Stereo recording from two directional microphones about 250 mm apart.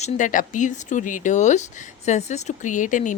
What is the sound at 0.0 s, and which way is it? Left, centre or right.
Speech, left.